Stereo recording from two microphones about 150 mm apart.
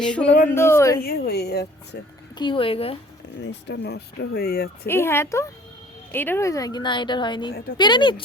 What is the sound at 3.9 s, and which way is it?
A woman's voice, 90° left.